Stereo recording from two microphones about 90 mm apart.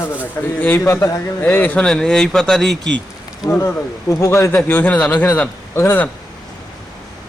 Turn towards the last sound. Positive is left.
turn(degrees=25)  # may be behind; listen again after turning